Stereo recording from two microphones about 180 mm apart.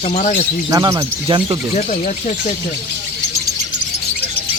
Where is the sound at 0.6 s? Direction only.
20° right (ahead or behind).